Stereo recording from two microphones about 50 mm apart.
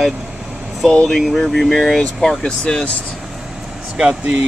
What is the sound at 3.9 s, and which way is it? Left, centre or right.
Speech, centre.